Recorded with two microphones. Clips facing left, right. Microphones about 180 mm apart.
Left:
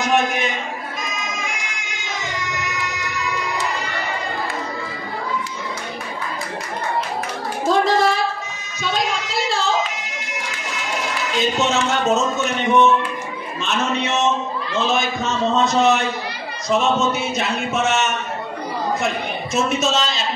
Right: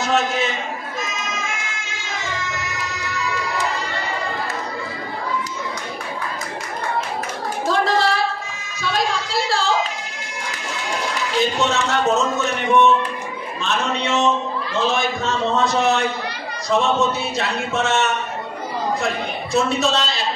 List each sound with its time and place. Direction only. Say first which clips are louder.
0.0 s a man's voice: left 1 dB; 15° left (ahead or behind)
1.2 s baby cry: even; 15° left (ahead or behind)
7.6 s a sound: left 3 dB; 20° left (ahead or behind)
11.3 s a man's voice: even; 20° left (ahead or behind)
19.5 s speech: right 1 dB; 20° left (ahead or behind)